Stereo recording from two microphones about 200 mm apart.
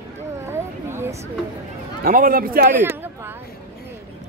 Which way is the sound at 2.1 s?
45° right (ahead or behind).